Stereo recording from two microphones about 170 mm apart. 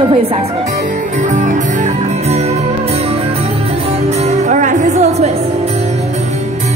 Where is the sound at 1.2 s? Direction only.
50° right (ahead or behind).